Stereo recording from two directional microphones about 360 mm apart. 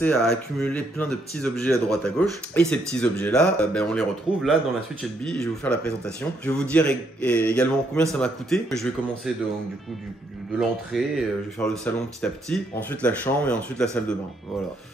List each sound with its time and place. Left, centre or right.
0.0 s a man's voice: centre
10.6 s a man's voice: centre